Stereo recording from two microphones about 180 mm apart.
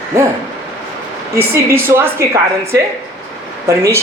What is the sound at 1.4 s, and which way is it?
A man's voice, 15° right (ahead or behind).